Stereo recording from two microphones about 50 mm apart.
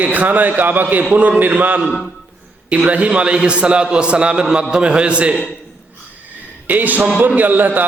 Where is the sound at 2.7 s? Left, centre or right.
Right.